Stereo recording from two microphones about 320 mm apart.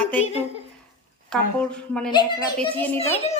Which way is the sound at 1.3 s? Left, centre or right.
Centre.